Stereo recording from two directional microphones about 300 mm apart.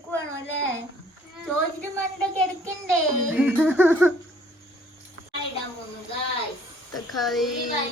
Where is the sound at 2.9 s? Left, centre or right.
Centre.